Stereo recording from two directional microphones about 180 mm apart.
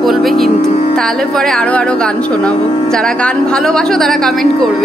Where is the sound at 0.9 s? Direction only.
Centre (ahead or behind).